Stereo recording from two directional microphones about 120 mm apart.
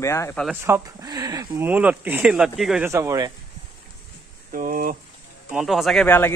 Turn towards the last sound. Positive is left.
turn(degrees=20)  # may be behind; listen again after turning